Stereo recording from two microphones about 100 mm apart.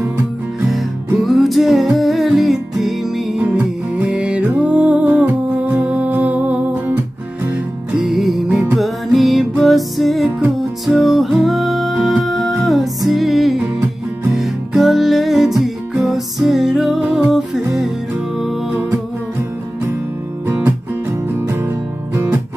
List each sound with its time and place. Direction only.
0.7 s music: centre (ahead or behind)
3.3 s music: 15° right (ahead or behind)
7.9 s music: centre (ahead or behind)
21.4 s music: 25° right (ahead or behind)